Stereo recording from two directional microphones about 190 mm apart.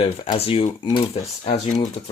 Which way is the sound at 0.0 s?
30° left (ahead or behind).